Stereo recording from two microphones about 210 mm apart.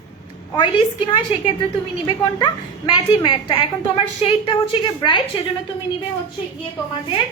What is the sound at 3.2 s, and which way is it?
A woman's voice, 25° left (ahead or behind).